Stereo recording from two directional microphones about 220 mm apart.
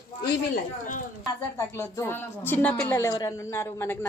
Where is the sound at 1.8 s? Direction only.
10° left (ahead or behind).